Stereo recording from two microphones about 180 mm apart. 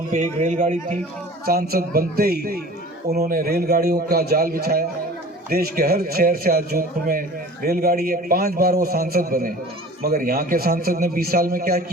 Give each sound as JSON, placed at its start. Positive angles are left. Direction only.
{"t": 0.1, "sound": "a man's voice", "side_deg": -40}
{"t": 1.5, "sound": "a man's voice", "side_deg": -55}